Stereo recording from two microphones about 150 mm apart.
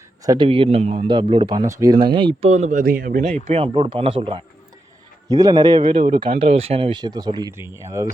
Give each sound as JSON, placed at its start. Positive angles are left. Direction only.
{"t": 0.3, "sound": "a man's voice", "side_deg": -35}
{"t": 1.6, "sound": "a man's voice", "side_deg": -20}
{"t": 2.0, "sound": "a man's voice", "side_deg": -35}
{"t": 2.5, "sound": "speech", "side_deg": -55}
{"t": 2.8, "sound": "speech", "side_deg": -80}
{"t": 3.4, "sound": "a man's voice", "side_deg": -40}
{"t": 7.5, "sound": "a man's voice", "side_deg": -15}